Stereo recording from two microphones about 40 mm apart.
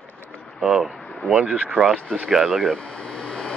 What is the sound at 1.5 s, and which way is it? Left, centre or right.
Speech, right.